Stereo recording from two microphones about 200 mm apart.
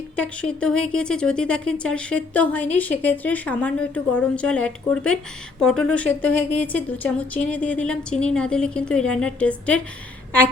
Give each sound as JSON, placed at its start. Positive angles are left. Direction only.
{"t": 0.2, "sound": "speech", "side_deg": 5}